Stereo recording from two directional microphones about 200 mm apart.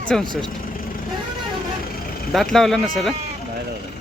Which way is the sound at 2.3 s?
Centre (ahead or behind).